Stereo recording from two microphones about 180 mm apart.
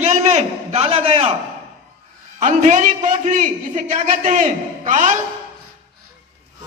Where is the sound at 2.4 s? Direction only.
40° right (ahead or behind).